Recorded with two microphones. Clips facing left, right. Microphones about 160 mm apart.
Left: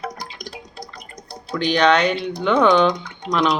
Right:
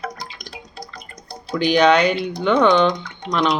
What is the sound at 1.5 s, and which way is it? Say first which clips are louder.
Speech: right 2 dB; 5° right (ahead or behind).